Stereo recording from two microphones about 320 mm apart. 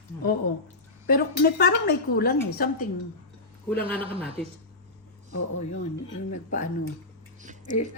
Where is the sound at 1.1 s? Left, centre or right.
Left.